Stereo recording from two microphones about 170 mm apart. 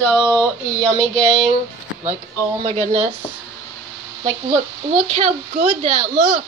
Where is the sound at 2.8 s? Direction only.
40° right (ahead or behind).